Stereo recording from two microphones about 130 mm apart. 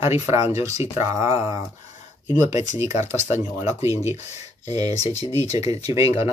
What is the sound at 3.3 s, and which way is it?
Speech, 20° right (ahead or behind).